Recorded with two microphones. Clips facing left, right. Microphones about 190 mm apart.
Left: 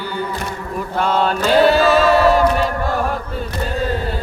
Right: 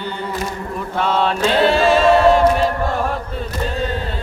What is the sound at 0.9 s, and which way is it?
Mantra, centre (ahead or behind).